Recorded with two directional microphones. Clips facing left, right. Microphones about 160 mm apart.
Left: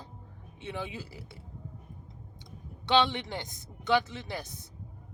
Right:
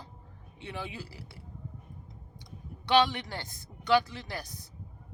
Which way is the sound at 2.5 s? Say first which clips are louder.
Even; 25° left (ahead or behind).